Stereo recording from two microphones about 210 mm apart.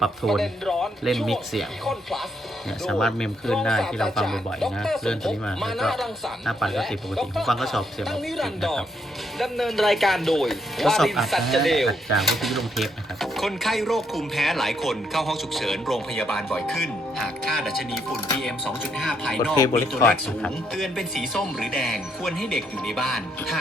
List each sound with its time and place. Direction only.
0.0 s speech: centre (ahead or behind)
19.5 s speech: 15° left (ahead or behind)